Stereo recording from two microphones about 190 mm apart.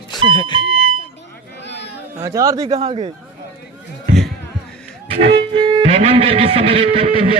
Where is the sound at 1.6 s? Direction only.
65° left (ahead or behind).